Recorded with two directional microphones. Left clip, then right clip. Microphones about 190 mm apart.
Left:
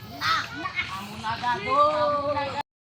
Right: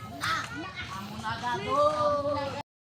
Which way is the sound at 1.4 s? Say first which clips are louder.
Left 5 dB; 25° right (ahead or behind).